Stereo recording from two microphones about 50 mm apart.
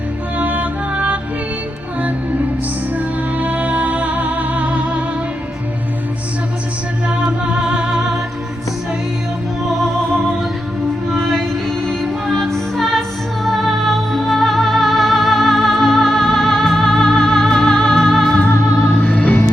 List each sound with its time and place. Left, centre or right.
0.3 s music: right
3.3 s music: right
7.3 s music: centre
11.9 s music: centre
19.0 s music: left